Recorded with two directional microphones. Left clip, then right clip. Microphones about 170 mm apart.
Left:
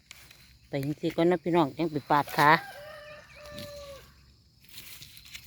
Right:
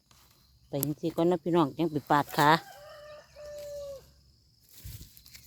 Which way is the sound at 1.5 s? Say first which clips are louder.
Left 1 dB; 20° right (ahead or behind).